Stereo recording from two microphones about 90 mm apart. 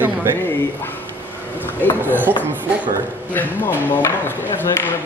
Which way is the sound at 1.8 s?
20° left (ahead or behind).